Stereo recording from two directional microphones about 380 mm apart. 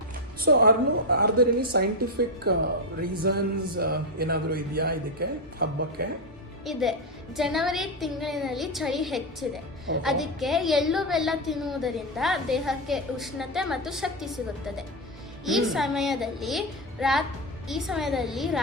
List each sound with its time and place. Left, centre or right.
0.4 s a woman's voice: right
6.7 s a woman's voice: centre
15.4 s a woman's voice: centre